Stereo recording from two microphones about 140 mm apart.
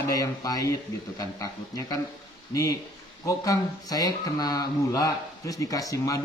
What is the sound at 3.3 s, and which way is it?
Speech, 25° left (ahead or behind).